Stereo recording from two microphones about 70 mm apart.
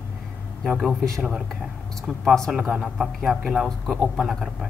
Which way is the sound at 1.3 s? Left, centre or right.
Centre.